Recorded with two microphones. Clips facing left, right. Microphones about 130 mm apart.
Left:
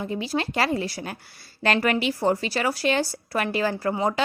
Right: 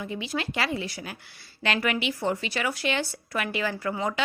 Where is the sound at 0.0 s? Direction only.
35° left (ahead or behind).